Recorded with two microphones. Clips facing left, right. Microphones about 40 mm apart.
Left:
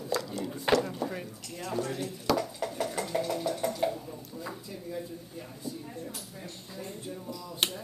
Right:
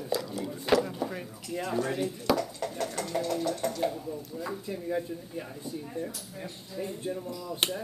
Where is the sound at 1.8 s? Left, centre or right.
Centre.